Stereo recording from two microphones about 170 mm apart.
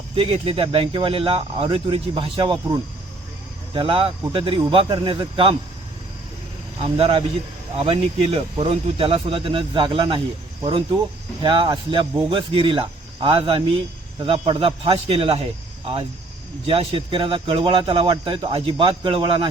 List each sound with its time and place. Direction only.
0.2 s speech: 35° right (ahead or behind)
6.8 s speech: 35° right (ahead or behind)
16.6 s speech: 35° right (ahead or behind)